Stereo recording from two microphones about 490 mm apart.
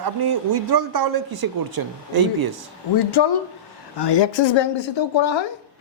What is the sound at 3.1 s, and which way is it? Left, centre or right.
Speech, left.